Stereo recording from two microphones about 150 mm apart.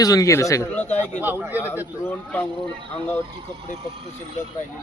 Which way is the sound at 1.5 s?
15° left (ahead or behind).